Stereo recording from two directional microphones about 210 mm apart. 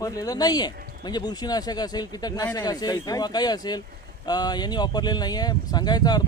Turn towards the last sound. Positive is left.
turn(degrees=20)  # may be behind; listen again after turning